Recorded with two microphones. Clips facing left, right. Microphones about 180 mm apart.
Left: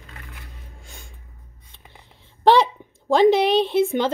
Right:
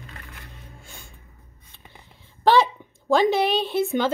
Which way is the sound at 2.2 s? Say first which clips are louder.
Left 2 dB; 25° left (ahead or behind).